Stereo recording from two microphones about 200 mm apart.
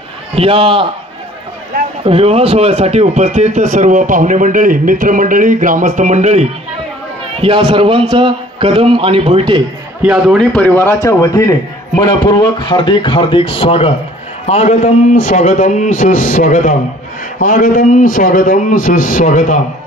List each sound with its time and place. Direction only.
0.4 s a man's voice: 25° right (ahead or behind)
2.0 s a man's voice: 30° right (ahead or behind)
10.0 s a man's voice: centre (ahead or behind); by 19.6 s 40° left (ahead or behind)